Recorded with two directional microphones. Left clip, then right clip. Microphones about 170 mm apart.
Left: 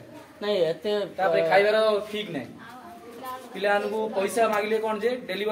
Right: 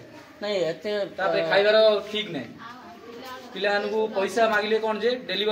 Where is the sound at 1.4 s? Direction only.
10° left (ahead or behind).